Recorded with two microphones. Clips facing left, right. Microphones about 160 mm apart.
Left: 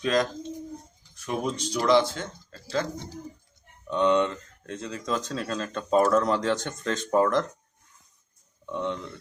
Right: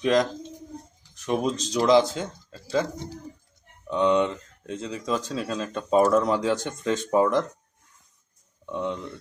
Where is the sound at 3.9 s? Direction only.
10° right (ahead or behind).